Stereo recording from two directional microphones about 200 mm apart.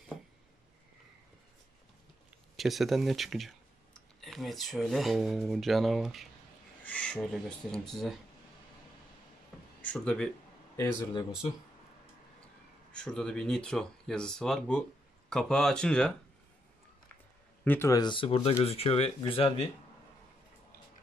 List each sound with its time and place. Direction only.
2.5 s speech: centre (ahead or behind)
9.8 s speech: 5° left (ahead or behind)
12.9 s speech: 5° left (ahead or behind)
17.6 s speech: 15° left (ahead or behind)